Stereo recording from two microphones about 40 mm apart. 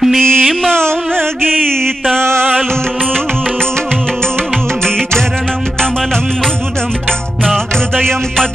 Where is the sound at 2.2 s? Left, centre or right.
Right.